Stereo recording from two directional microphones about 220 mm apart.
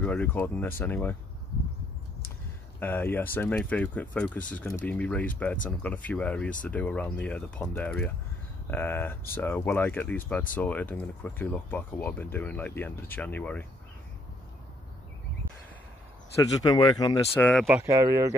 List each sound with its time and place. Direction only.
0.0 s speech: 5° left (ahead or behind)
2.8 s speech: 10° left (ahead or behind)
16.6 s speech: 20° left (ahead or behind)
17.6 s speech: 10° right (ahead or behind)